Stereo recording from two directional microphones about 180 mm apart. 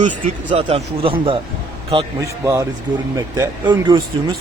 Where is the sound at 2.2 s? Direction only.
15° right (ahead or behind).